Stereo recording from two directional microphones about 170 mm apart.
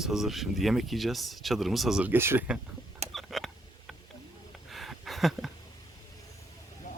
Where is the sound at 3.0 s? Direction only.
Centre (ahead or behind).